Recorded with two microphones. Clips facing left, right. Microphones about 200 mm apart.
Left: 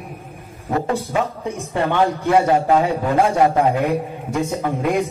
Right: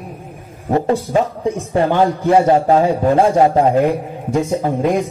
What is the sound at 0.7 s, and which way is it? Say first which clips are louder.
A man's voice: right 5 dB; 30° right (ahead or behind).